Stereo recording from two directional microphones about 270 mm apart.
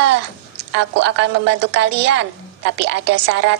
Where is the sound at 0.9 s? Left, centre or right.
Right.